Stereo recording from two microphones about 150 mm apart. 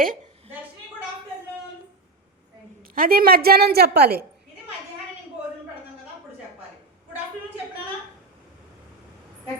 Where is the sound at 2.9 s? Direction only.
80° right.